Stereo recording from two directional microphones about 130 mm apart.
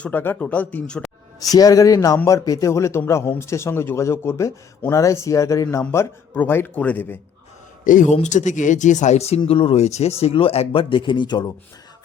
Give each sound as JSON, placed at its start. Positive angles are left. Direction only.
{"t": 0.0, "sound": "speech", "side_deg": 15}
{"t": 1.4, "sound": "a man's voice", "side_deg": 30}
{"t": 7.9, "sound": "a man's voice", "side_deg": 90}
{"t": 8.1, "sound": "speech", "side_deg": 65}